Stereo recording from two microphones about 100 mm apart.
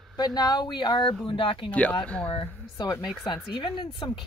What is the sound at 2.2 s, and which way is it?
Speech, 45° left (ahead or behind).